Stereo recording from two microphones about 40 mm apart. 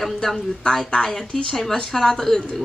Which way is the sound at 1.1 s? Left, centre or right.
Centre.